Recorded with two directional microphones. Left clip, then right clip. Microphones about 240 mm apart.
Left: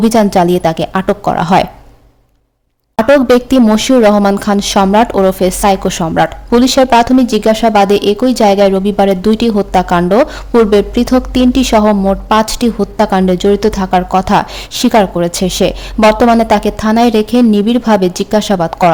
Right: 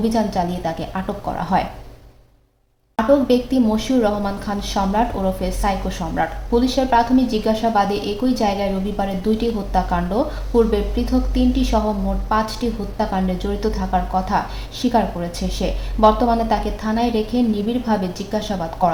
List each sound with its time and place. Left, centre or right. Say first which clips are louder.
0.1 s a woman's voice: left 12 dB; left
3.2 s a woman's voice: left 9 dB; left